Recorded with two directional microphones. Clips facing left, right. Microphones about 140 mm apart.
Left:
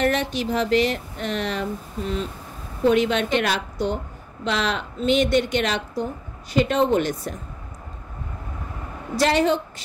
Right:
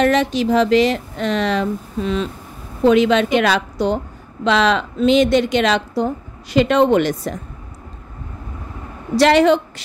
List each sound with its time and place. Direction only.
0.0 s a woman's voice: 90° right
9.1 s a woman's voice: 80° right